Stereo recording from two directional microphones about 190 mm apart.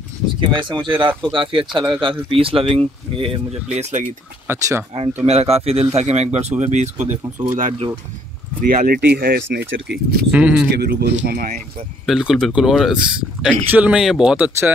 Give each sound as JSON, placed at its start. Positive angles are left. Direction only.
{"t": 0.4, "sound": "speech", "side_deg": -25}
{"t": 4.5, "sound": "speech", "side_deg": -15}
{"t": 5.2, "sound": "speech", "side_deg": -35}
{"t": 8.5, "sound": "speech", "side_deg": -50}
{"t": 10.3, "sound": "speech", "side_deg": -5}
{"t": 10.8, "sound": "speech", "side_deg": -55}
{"t": 11.2, "sound": "speech", "side_deg": -45}
{"t": 12.1, "sound": "speech", "side_deg": 0}